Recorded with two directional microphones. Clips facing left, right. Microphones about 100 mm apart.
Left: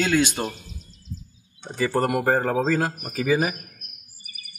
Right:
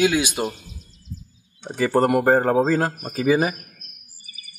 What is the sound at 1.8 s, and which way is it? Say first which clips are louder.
A man's voice: right 4 dB; 25° right (ahead or behind).